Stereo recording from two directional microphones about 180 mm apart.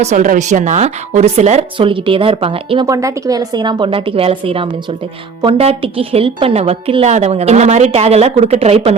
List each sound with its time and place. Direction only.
0.0 s a woman's voice: 40° right (ahead or behind)
2.8 s a woman's voice: 20° right (ahead or behind); by 9.0 s 35° right (ahead or behind)